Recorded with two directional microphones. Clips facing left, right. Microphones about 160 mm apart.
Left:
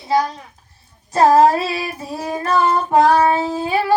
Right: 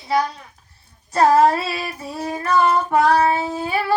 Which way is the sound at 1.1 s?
25° left (ahead or behind).